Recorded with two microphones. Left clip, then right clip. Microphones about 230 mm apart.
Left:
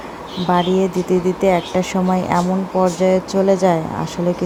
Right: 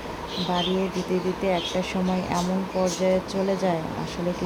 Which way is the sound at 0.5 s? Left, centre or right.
Left.